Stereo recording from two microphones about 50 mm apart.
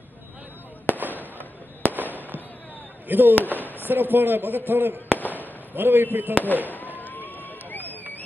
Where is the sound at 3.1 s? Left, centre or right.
Right.